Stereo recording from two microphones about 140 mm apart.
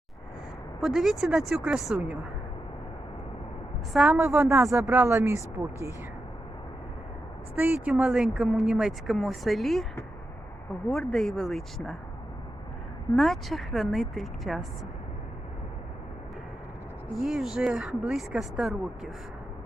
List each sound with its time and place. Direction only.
0.8 s speech: 5° right (ahead or behind)
3.9 s speech: 5° right (ahead or behind)
4.4 s speech: 20° right (ahead or behind)
7.5 s speech: 10° right (ahead or behind)
13.1 s speech: centre (ahead or behind)
17.2 s speech: centre (ahead or behind)